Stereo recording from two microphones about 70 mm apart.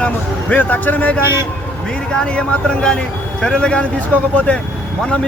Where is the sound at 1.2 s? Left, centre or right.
Right.